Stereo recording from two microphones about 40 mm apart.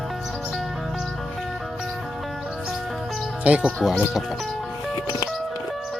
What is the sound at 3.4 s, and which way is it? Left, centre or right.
Speech, right.